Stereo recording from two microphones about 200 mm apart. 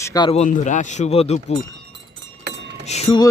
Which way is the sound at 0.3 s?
35° left (ahead or behind).